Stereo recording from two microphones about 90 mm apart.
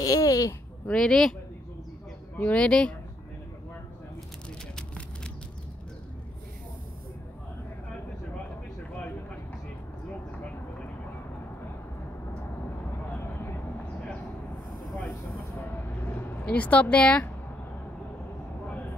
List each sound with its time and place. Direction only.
0.0 s speech: 45° left (ahead or behind)
0.8 s speech: 5° left (ahead or behind)
2.3 s speech: 15° left (ahead or behind)
4.7 s vehicle: 10° left (ahead or behind)
13.2 s vehicle: 25° left (ahead or behind)
15.0 s vehicle: 25° left (ahead or behind)
16.4 s speech: 15° left (ahead or behind)